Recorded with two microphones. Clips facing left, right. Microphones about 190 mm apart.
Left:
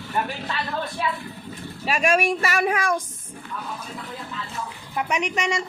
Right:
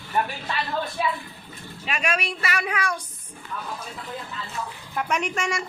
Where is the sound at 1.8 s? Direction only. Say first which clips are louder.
Left 7 dB; 40° left (ahead or behind).